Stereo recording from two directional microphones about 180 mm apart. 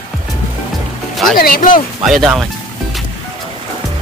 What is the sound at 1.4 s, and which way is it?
Speech, 50° left (ahead or behind).